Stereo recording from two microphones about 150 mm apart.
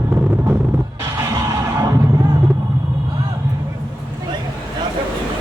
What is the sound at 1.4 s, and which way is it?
Music, 20° right (ahead or behind).